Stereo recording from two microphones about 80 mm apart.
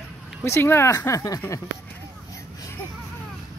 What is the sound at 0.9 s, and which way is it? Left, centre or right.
Speech, left.